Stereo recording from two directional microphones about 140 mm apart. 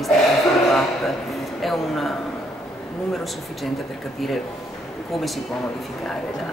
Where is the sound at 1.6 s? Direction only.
Centre (ahead or behind).